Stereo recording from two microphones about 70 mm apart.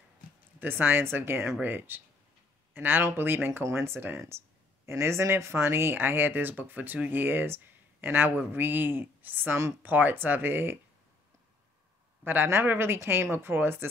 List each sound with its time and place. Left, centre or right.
0.6 s speech: right
12.3 s speech: right